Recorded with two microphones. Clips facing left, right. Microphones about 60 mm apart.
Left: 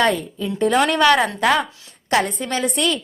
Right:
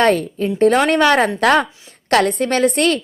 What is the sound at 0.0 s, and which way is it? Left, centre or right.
Speech, right.